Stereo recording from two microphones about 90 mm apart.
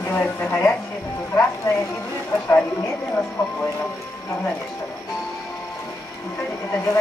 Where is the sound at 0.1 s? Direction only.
20° left (ahead or behind).